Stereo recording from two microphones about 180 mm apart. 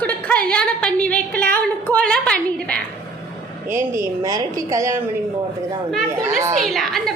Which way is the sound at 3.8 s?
15° right (ahead or behind).